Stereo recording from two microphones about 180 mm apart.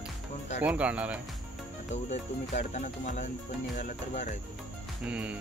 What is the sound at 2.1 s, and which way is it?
Music, 40° left (ahead or behind).